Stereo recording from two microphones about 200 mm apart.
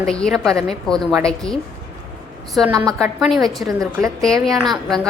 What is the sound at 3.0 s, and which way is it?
Speech, centre (ahead or behind).